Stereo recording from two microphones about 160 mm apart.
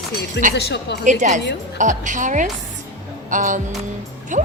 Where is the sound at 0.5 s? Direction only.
90° left.